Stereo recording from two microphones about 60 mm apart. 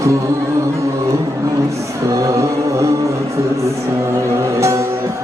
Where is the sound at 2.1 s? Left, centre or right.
Right.